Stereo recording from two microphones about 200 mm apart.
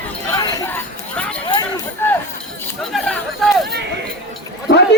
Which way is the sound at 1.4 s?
20° left (ahead or behind).